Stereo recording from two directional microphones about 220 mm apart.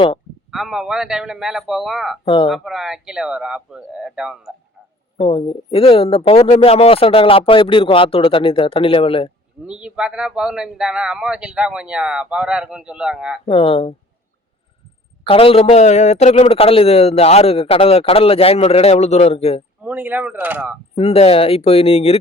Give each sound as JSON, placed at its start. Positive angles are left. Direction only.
{"t": 0.5, "sound": "speech", "side_deg": 0}
{"t": 2.2, "sound": "a man's voice", "side_deg": 20}
{"t": 2.5, "sound": "speech", "side_deg": 0}
{"t": 5.3, "sound": "a man's voice", "side_deg": 25}
{"t": 9.6, "sound": "speech", "side_deg": -5}
{"t": 13.5, "sound": "a man's voice", "side_deg": 25}
{"t": 15.3, "sound": "a man's voice", "side_deg": 25}
{"t": 19.8, "sound": "speech", "side_deg": -5}
{"t": 20.9, "sound": "a man's voice", "side_deg": 30}